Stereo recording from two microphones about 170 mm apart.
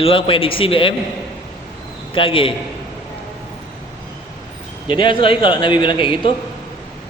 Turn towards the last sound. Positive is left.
turn(degrees=30)  # may be behind; listen again after turning